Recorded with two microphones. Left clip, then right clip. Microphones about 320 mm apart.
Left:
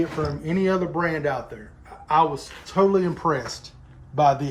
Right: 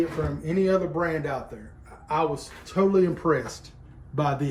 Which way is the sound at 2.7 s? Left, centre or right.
Left.